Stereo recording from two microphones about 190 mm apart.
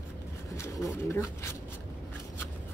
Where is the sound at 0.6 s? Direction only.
15° left (ahead or behind).